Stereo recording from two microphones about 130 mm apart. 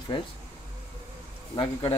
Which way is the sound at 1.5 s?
45° left (ahead or behind).